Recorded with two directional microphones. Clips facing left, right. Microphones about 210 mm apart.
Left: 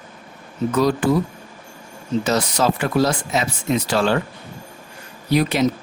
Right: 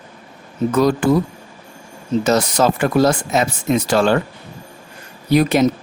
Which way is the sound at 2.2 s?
45° right (ahead or behind).